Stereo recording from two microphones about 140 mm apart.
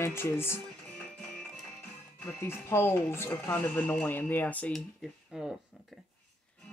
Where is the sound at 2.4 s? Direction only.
15° left (ahead or behind); by 5.9 s 5° right (ahead or behind).